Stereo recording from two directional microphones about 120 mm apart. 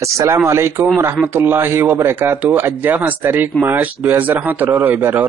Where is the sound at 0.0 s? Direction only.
25° right (ahead or behind).